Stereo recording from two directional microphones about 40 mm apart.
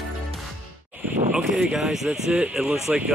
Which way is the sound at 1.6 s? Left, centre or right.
Centre.